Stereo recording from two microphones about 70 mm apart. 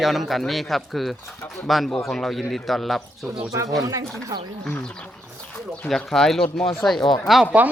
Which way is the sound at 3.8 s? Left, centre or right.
Right.